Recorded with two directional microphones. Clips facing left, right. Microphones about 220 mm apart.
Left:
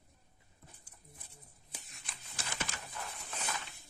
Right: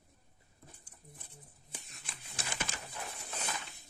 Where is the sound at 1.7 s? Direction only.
Centre (ahead or behind).